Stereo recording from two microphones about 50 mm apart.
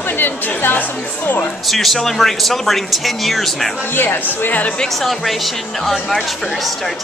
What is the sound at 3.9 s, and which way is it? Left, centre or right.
Speech, left.